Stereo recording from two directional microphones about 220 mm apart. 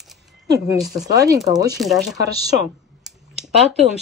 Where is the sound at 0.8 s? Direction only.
Centre (ahead or behind).